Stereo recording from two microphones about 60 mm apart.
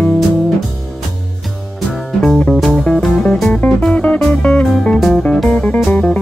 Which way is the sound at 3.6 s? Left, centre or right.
Left.